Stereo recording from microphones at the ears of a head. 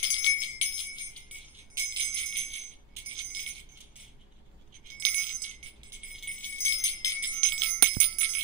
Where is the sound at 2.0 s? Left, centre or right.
Right.